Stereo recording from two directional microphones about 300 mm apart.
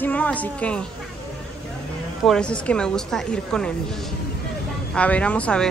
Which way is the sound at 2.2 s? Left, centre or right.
Centre.